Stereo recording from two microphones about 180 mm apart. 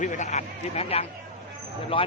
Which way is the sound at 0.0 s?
45° left (ahead or behind).